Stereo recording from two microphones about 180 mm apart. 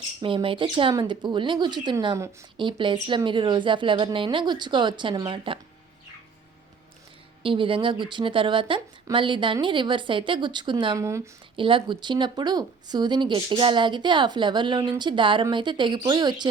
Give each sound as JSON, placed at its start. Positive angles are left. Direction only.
{"t": 0.2, "sound": "speech", "side_deg": -30}
{"t": 7.4, "sound": "speech", "side_deg": -30}
{"t": 11.5, "sound": "speech", "side_deg": -30}